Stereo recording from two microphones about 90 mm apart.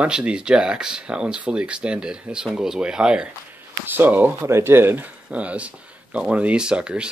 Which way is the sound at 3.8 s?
20° right (ahead or behind).